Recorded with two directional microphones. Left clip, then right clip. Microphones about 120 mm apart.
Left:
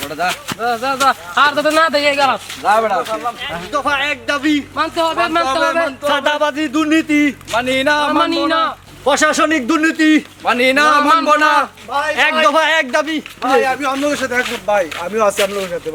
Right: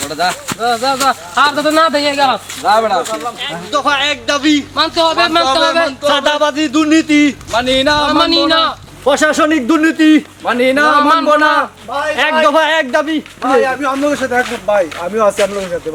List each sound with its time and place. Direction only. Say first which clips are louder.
0.3 s speech: right 3 dB; 10° left (ahead or behind)
8.1 s a man's voice: right 4 dB; centre (ahead or behind)
10.4 s speech: left 1 dB; 15° left (ahead or behind)
11.0 s a man's voice: right 2 dB; centre (ahead or behind)
11.3 s speech: right 2 dB; 10° left (ahead or behind)